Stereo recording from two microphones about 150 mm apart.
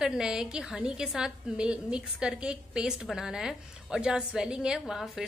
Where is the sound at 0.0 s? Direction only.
5° right (ahead or behind).